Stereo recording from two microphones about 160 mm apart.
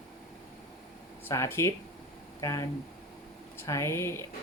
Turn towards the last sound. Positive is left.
turn(degrees=15)  # may be behind; listen again after turning